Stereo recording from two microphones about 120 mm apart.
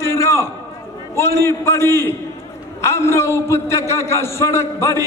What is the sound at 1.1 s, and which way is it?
A man's voice, 20° left (ahead or behind).